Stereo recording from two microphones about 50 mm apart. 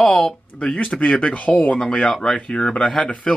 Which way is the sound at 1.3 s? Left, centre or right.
Left.